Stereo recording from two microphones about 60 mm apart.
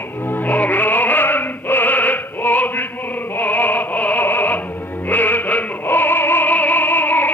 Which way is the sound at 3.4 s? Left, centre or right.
Left.